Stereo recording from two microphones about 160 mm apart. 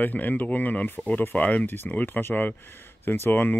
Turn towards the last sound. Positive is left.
turn(degrees=10)  # may be behind; listen again after turning